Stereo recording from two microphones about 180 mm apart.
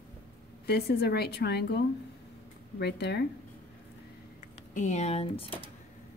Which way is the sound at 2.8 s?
70° left (ahead or behind).